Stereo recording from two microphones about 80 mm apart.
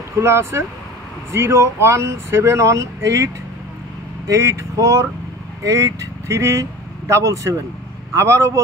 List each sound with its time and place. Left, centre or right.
0.2 s speech: right
4.3 s speech: right